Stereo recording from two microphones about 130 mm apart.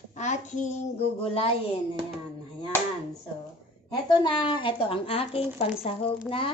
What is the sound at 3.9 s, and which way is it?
A woman's voice, 35° left (ahead or behind).